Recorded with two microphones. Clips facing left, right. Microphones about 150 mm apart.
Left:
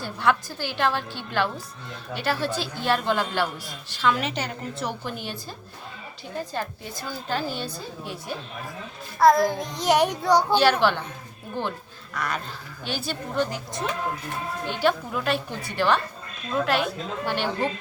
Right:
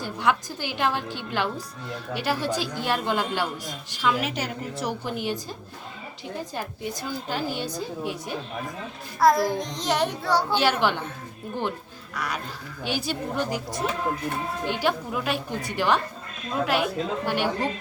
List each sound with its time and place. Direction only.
0.0 s a woman's voice: 15° right (ahead or behind)
6.5 s a woman's voice: 15° right (ahead or behind)
9.1 s a child's voice: centre (ahead or behind); by 10.6 s 15° left (ahead or behind)
10.6 s a woman's voice: 15° right (ahead or behind)
12.1 s a woman's voice: 10° right (ahead or behind)